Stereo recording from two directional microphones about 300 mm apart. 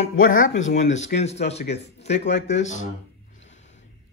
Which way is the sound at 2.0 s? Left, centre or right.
Left.